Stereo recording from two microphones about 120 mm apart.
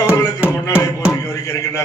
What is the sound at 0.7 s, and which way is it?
Speech, 5° right (ahead or behind).